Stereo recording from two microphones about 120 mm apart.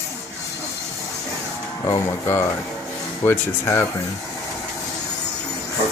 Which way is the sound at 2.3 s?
20° left (ahead or behind).